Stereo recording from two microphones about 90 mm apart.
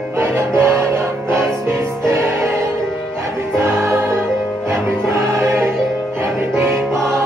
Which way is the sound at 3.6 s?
25° right (ahead or behind).